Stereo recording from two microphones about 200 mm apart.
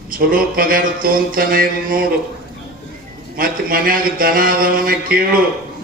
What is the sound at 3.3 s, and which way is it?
A man's voice, 45° right (ahead or behind).